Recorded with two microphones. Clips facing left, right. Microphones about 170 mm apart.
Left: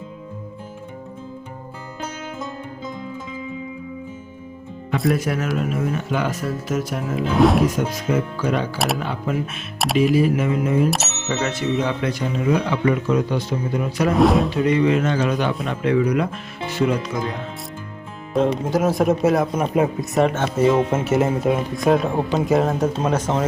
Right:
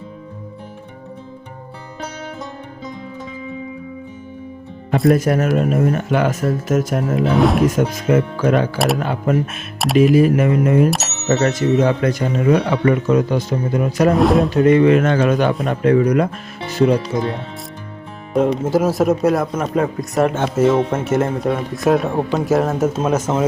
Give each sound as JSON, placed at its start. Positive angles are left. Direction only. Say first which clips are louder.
{"t": 5.1, "sound": "speech", "louder": "right 6 dB", "side_deg": -45}
{"t": 7.3, "sound": "speech", "louder": "even", "side_deg": 0}
{"t": 7.8, "sound": "speech", "louder": "right 5 dB", "side_deg": -50}
{"t": 9.7, "sound": "speech", "louder": "right 4 dB", "side_deg": 0}
{"t": 10.0, "sound": "speech", "louder": "right 5 dB", "side_deg": -50}
{"t": 11.3, "sound": "speech", "louder": "right 7 dB", "side_deg": -45}
{"t": 14.1, "sound": "speech", "louder": "right 1 dB", "side_deg": 0}
{"t": 14.5, "sound": "speech", "louder": "right 6 dB", "side_deg": -50}
{"t": 18.3, "sound": "speech", "louder": "right 3 dB", "side_deg": -10}
{"t": 19.5, "sound": "a man's voice", "louder": "even", "side_deg": 10}
{"t": 20.3, "sound": "speech", "louder": "right 3 dB", "side_deg": -10}
{"t": 20.9, "sound": "speech", "louder": "right 1 dB", "side_deg": 5}